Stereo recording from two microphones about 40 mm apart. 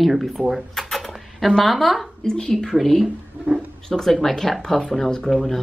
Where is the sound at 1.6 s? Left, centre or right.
Centre.